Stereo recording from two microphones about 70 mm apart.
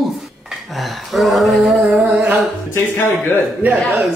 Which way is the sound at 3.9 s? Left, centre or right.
Centre.